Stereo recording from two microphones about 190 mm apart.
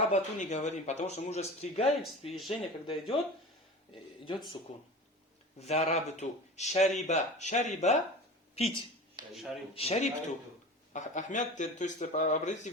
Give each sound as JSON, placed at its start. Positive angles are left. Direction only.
{"t": 0.0, "sound": "speech", "side_deg": 40}
{"t": 4.7, "sound": "speech", "side_deg": 35}
{"t": 9.3, "sound": "speech", "side_deg": 0}
{"t": 9.7, "sound": "speech", "side_deg": 35}